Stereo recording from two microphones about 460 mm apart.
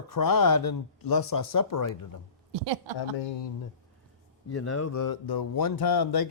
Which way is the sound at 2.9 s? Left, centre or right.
Left.